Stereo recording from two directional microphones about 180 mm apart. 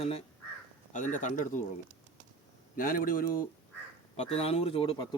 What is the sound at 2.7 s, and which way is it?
Speech, 50° left (ahead or behind).